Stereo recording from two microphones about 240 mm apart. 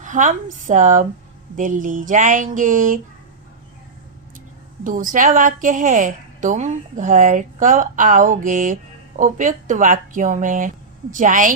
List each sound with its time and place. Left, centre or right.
0.0 s a woman's voice: right
4.8 s a woman's voice: right